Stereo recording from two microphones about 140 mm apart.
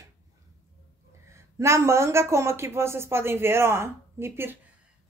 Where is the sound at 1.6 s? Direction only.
20° right (ahead or behind).